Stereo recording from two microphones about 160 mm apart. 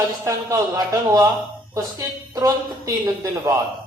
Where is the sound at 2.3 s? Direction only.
20° right (ahead or behind).